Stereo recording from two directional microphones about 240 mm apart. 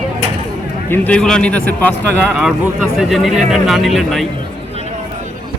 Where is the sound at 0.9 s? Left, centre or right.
Centre.